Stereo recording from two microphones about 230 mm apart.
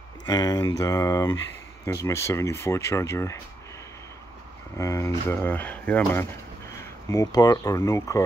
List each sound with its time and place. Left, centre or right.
0.3 s speech: centre
4.7 s speech: centre